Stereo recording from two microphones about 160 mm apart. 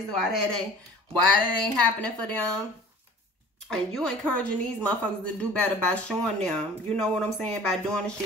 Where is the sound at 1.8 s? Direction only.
10° left (ahead or behind).